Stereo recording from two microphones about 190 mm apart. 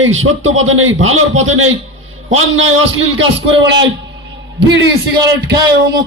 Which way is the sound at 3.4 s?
70° right (ahead or behind).